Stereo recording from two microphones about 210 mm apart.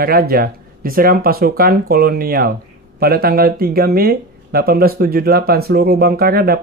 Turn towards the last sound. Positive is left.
turn(degrees=-45)  # may be behind; listen again after turning